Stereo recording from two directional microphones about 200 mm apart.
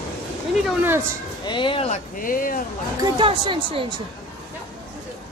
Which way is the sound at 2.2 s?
45° left (ahead or behind).